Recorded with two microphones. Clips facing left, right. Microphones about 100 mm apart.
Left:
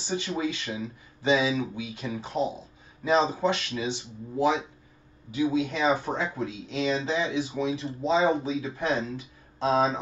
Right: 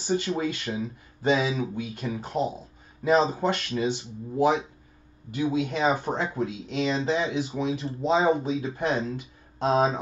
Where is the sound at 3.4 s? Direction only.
45° right (ahead or behind).